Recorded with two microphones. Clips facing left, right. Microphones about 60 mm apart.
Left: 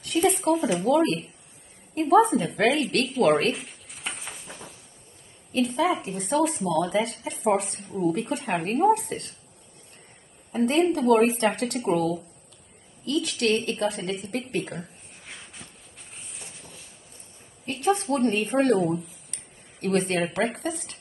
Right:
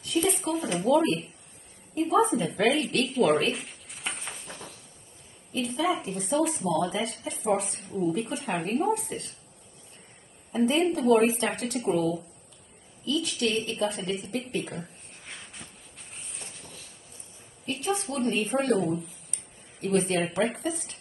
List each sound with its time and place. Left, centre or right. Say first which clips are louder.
0.0 s speech: left 4 dB; left
3.5 s a sound: even; centre
5.5 s speech: left 4 dB; left
10.5 s a woman's voice: left 2 dB; left
14.8 s a sound: left 1 dB; centre
17.6 s a woman's voice: left 6 dB; left
18.9 s speech: left 2 dB; centre
19.3 s a sound: left 1 dB; left
20.3 s speech: left 1 dB; left